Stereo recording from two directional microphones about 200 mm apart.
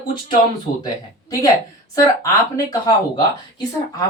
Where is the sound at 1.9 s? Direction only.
15° left (ahead or behind).